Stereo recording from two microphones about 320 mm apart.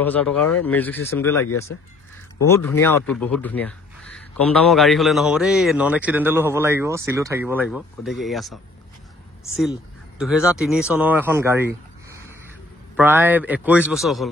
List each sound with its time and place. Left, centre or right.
0.0 s speech: centre
2.4 s speech: centre
10.1 s speech: centre